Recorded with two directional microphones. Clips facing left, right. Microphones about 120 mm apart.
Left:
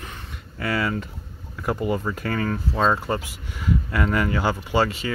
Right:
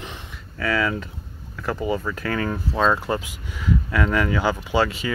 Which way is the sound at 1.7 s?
5° right (ahead or behind).